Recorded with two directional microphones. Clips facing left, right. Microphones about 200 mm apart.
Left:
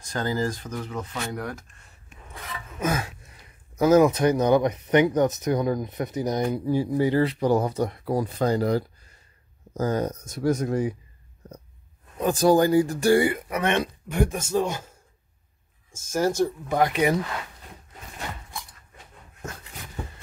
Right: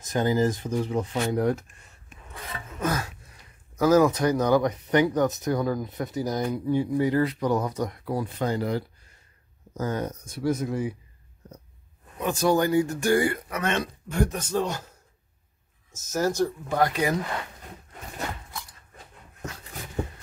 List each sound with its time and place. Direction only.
0.0 s speech: 20° right (ahead or behind)
2.8 s speech: 15° left (ahead or behind)
6.6 s speech: 35° left (ahead or behind)
12.2 s speech: 35° left (ahead or behind)
13.2 s speech: 20° left (ahead or behind)
16.3 s speech: 15° left (ahead or behind)